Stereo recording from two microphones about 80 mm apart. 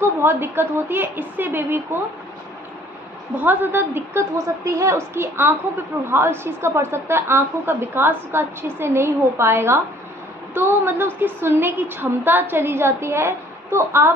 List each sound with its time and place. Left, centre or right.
0.0 s a woman's voice: right
3.3 s a woman's voice: right
4.6 s a woman's voice: right